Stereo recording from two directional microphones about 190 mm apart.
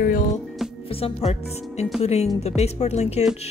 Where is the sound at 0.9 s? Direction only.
30° left (ahead or behind).